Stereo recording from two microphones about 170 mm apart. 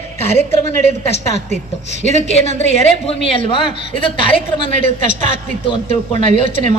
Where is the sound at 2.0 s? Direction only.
40° left (ahead or behind).